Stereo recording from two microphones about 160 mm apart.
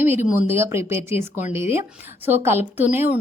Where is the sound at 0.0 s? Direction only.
15° right (ahead or behind).